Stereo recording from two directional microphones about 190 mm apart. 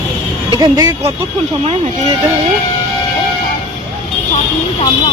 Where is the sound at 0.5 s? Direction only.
20° right (ahead or behind).